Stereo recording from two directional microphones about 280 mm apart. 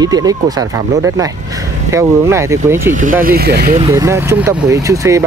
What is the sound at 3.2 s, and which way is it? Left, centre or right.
Speech, right.